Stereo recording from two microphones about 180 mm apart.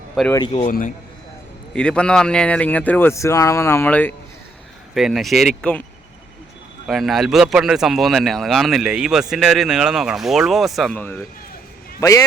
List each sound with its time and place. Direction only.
0.7 s a man's voice: 45° left (ahead or behind)
1.7 s speech: 5° left (ahead or behind)
4.9 s speech: centre (ahead or behind)
6.8 s a man's voice: centre (ahead or behind); by 12.2 s 20° left (ahead or behind)